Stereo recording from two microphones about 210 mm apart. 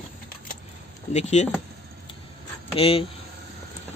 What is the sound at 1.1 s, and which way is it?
Speech, 35° left (ahead or behind).